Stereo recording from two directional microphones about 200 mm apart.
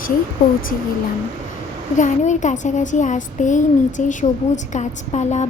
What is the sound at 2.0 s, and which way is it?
Speech, 40° left (ahead or behind).